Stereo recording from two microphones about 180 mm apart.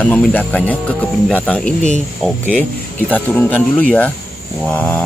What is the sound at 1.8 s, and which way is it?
Speech, 40° left (ahead or behind).